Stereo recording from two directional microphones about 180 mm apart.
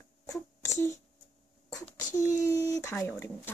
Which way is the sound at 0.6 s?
15° left (ahead or behind).